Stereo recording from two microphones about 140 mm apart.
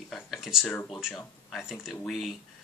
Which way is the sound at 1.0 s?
Centre (ahead or behind).